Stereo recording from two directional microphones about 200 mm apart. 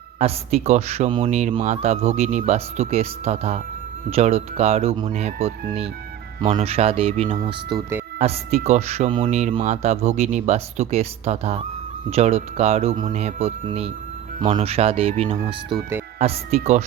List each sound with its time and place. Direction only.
0.2 s speech: 30° right (ahead or behind)
7.3 s speech: 20° right (ahead or behind)
8.2 s speech: 30° right (ahead or behind)